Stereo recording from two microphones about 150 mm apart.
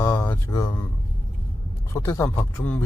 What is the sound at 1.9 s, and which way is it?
Speech, 20° left (ahead or behind).